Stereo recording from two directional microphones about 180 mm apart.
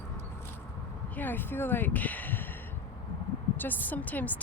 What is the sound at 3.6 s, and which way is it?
Speech, 10° left (ahead or behind).